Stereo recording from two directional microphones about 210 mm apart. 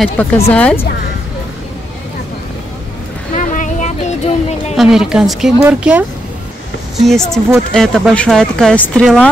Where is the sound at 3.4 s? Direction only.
35° left (ahead or behind).